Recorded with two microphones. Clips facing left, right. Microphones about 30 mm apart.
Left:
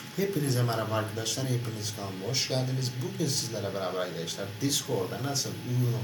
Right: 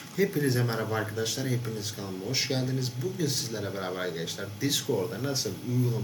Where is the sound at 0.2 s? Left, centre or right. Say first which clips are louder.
Right 3 dB; centre.